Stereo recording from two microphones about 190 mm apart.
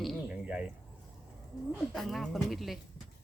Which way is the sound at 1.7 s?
Centre (ahead or behind).